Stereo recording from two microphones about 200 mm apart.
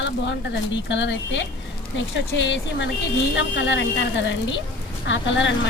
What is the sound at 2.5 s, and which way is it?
A woman's voice, 60° left (ahead or behind).